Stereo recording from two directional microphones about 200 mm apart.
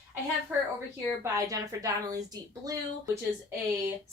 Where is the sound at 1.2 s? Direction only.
15° right (ahead or behind).